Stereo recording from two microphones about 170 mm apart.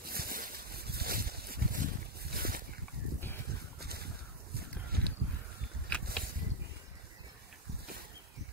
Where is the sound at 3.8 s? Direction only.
65° right (ahead or behind).